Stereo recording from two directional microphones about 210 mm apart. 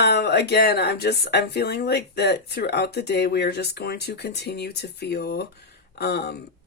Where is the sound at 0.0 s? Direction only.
50° left (ahead or behind).